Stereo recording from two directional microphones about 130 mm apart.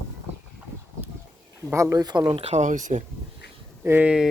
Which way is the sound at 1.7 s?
25° right (ahead or behind).